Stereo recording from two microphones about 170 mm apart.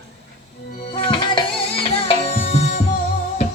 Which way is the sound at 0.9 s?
30° left (ahead or behind).